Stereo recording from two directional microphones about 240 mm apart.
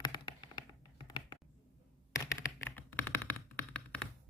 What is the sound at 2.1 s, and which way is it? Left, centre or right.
Music, centre.